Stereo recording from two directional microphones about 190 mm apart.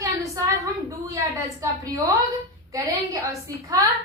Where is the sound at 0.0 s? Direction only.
15° right (ahead or behind).